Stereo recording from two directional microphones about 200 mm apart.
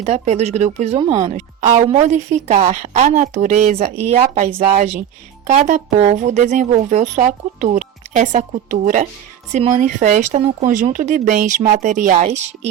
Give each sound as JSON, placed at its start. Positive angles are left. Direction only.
{"t": 0.0, "sound": "speech", "side_deg": -35}